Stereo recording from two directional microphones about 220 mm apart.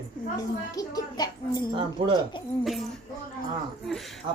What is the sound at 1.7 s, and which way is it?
Speech, 20° right (ahead or behind).